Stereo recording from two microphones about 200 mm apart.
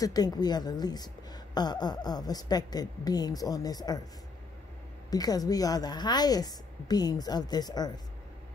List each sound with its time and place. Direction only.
0.0 s a woman's voice: 20° left (ahead or behind)
5.1 s a woman's voice: 20° left (ahead or behind)